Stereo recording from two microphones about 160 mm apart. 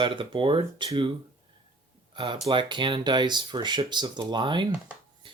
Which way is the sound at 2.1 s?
30° right (ahead or behind).